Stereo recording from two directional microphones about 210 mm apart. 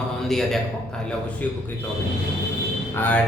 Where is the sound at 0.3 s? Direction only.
Centre (ahead or behind).